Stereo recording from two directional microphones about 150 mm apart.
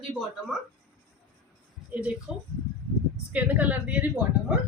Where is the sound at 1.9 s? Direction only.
10° right (ahead or behind).